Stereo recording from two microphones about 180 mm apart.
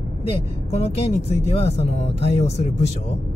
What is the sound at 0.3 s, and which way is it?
Speech, 35° left (ahead or behind).